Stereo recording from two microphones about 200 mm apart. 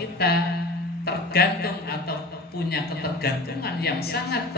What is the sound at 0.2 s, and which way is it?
A woman's voice, 50° left (ahead or behind).